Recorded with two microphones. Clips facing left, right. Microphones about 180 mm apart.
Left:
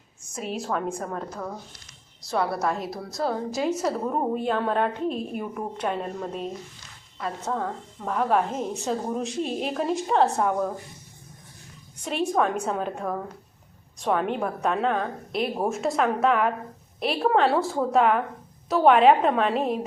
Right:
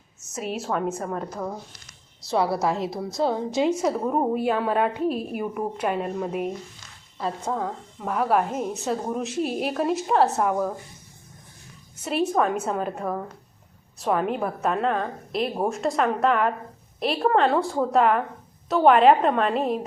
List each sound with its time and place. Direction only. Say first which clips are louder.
0.3 s a woman's voice: right 2 dB; 5° right (ahead or behind)
2.3 s a woman's voice: right 3 dB; 25° right (ahead or behind)
3.8 s a woman's voice: right 3 dB; 10° right (ahead or behind)
12.0 s a woman's voice: right 1 dB; 5° right (ahead or behind)